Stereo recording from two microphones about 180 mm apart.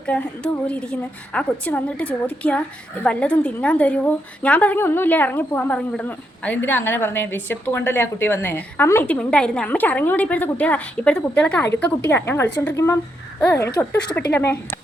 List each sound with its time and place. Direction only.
0.0 s a woman's voice: 5° left (ahead or behind)